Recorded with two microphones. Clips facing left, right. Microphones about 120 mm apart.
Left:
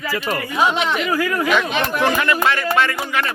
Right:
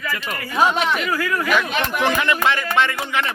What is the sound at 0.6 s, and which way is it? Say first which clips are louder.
Speech: right 1 dB; 45° right (ahead or behind).